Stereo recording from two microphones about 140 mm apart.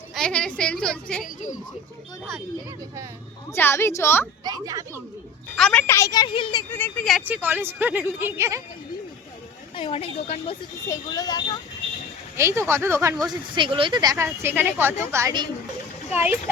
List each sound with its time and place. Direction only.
0.1 s a woman's voice: 5° left (ahead or behind)
3.5 s a woman's voice: 15° left (ahead or behind)
4.4 s speech: 25° right (ahead or behind)
5.5 s a woman's voice: 5° left (ahead or behind)
5.8 s speech: 20° left (ahead or behind)
6.7 s a woman's voice: 15° left (ahead or behind)
7.3 s speech: 10° right (ahead or behind)
9.7 s a woman's voice: 40° left (ahead or behind)
10.8 s speech: 25° left (ahead or behind)
12.4 s speech: 20° right (ahead or behind)
13.6 s speech: 40° right (ahead or behind)
14.4 s speech: 15° right (ahead or behind)